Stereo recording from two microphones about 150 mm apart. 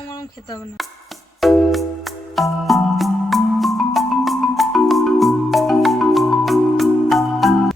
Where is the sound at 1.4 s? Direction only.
Centre (ahead or behind).